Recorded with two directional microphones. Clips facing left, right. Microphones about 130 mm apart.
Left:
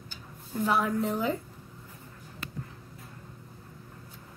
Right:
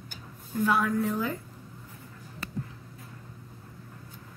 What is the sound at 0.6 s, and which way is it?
Speech, 25° left (ahead or behind).